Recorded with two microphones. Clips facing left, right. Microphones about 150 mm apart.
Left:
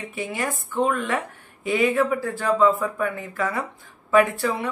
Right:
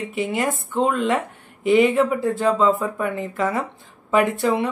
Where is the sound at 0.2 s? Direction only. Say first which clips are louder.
Right 5 dB; 25° right (ahead or behind).